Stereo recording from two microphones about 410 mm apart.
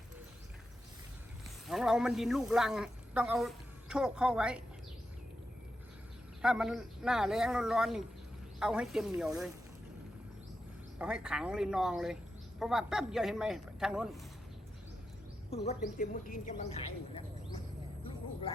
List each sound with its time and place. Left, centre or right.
1.6 s speech: centre
6.4 s a man's voice: centre
10.9 s a man's voice: centre
15.4 s speech: centre